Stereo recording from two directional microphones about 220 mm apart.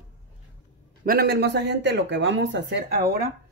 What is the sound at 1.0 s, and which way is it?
Speech, 45° right (ahead or behind).